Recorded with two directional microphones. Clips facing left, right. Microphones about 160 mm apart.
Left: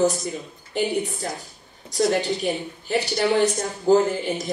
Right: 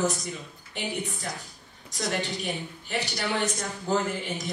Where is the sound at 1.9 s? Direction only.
35° left (ahead or behind).